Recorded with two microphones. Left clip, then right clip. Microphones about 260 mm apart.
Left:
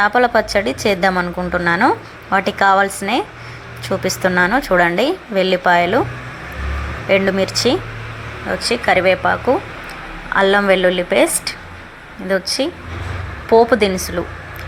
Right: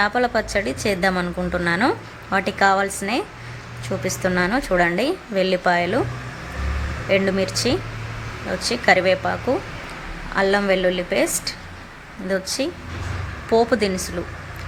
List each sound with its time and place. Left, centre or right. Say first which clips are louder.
0.0 s a woman's voice: left 6 dB; centre
7.1 s a woman's voice: left 5 dB; centre
8.7 s a woman's voice: left 3 dB; centre